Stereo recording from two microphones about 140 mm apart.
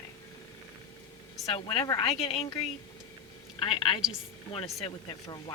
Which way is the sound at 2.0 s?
45° left (ahead or behind).